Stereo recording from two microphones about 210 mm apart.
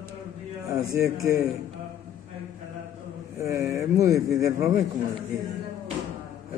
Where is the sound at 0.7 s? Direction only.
15° right (ahead or behind).